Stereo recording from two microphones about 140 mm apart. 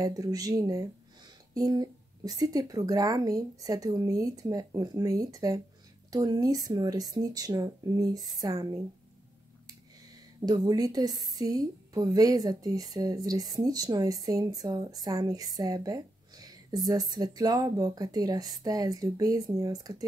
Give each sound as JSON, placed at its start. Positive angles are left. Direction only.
{"t": 0.0, "sound": "a woman's voice", "side_deg": -25}
{"t": 10.4, "sound": "a woman's voice", "side_deg": -30}